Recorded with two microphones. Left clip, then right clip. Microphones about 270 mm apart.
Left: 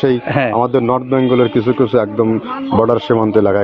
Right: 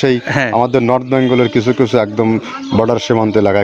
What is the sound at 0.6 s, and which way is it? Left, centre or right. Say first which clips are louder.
A man's voice: right 4 dB; right.